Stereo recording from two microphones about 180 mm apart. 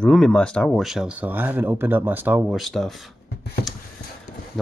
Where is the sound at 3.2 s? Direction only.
65° left (ahead or behind).